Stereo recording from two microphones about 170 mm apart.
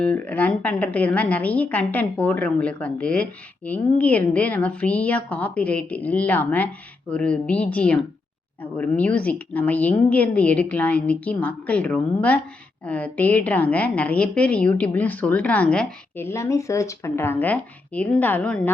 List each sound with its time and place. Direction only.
0.0 s a woman's voice: 10° left (ahead or behind)